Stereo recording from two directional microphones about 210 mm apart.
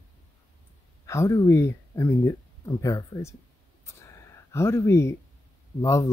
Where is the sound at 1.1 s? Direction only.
15° left (ahead or behind).